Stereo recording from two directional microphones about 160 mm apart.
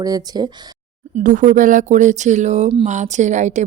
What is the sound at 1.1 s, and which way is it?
A woman's voice, 55° right (ahead or behind).